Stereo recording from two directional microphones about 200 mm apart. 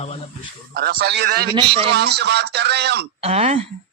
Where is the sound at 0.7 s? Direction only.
50° right (ahead or behind).